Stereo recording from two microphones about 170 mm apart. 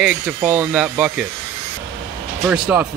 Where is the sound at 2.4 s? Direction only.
5° right (ahead or behind).